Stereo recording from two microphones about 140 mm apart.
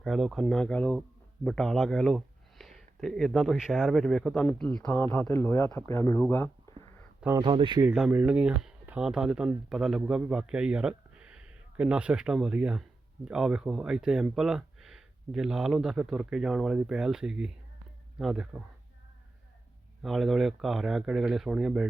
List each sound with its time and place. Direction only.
0.0 s speech: centre (ahead or behind); by 6.7 s 15° left (ahead or behind)
7.4 s speech: 35° right (ahead or behind)
7.9 s speech: 10° right (ahead or behind)
20.0 s speech: centre (ahead or behind)